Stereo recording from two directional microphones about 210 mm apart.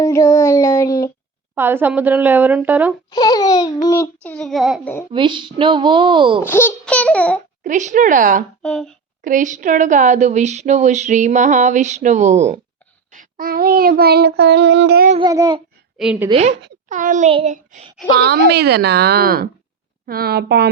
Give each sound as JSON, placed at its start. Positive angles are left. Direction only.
{"t": 0.0, "sound": "child singing", "side_deg": 15}
{"t": 1.5, "sound": "a woman's voice", "side_deg": -10}
{"t": 3.1, "sound": "babbling", "side_deg": 20}
{"t": 4.2, "sound": "child singing", "side_deg": 5}
{"t": 5.1, "sound": "speech", "side_deg": -25}
{"t": 6.4, "sound": "child singing", "side_deg": 10}
{"t": 7.6, "sound": "a woman's voice", "side_deg": -35}
{"t": 8.6, "sound": "child singing", "side_deg": 5}
{"t": 9.2, "sound": "a woman's voice", "side_deg": -40}
{"t": 13.1, "sound": "child singing", "side_deg": -40}
{"t": 15.2, "sound": "speech", "side_deg": -20}
{"t": 16.0, "sound": "a woman's voice", "side_deg": -5}
{"t": 16.3, "sound": "a woman's voice", "side_deg": -30}
{"t": 18.1, "sound": "child singing", "side_deg": -50}